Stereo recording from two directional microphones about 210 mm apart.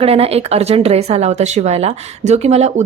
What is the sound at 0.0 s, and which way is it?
A woman's voice, 30° right (ahead or behind).